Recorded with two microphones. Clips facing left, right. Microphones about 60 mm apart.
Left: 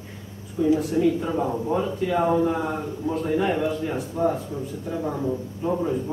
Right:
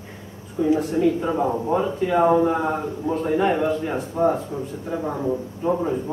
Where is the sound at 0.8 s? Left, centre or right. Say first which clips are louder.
Right 1 dB; centre.